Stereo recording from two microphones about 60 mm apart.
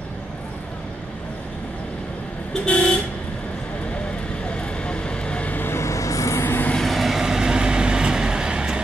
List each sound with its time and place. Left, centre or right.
2.5 s vehicle: left
4.6 s vehicle: centre
5.6 s a sound: left
6.4 s vehicle: left
6.8 s vehicle: centre